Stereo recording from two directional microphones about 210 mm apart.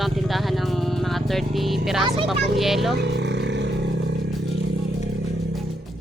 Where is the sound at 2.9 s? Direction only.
55° right (ahead or behind).